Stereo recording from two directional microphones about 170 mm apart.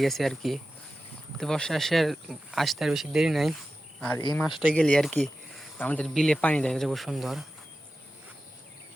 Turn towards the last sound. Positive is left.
turn(degrees=0)  # may be behind; listen again after turning